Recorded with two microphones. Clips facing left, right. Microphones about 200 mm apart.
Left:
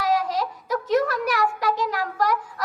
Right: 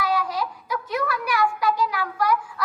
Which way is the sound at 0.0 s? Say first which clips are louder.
Left 2 dB; 40° left (ahead or behind).